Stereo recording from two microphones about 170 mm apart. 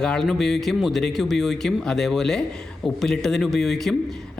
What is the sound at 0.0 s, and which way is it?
A man's voice, 5° left (ahead or behind).